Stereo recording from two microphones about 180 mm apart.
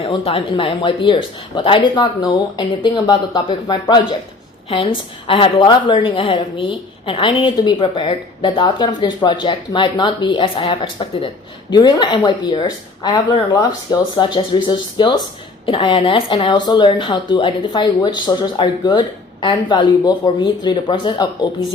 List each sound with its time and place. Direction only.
0.0 s a woman's voice: 35° left (ahead or behind)
5.3 s a woman's voice: 25° left (ahead or behind)